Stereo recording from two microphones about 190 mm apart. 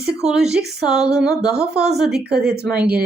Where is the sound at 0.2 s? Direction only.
5° right (ahead or behind).